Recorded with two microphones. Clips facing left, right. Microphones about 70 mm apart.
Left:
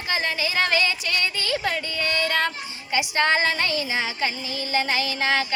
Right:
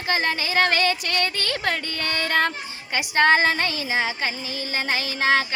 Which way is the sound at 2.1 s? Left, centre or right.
Right.